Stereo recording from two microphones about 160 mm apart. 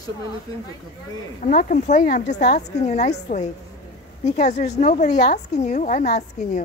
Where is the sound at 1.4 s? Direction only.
55° left (ahead or behind).